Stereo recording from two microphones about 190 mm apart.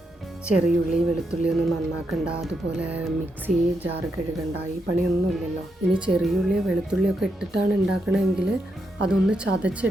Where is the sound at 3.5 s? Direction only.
45° right (ahead or behind).